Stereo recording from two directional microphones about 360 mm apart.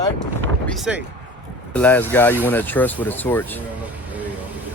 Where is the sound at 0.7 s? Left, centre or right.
Centre.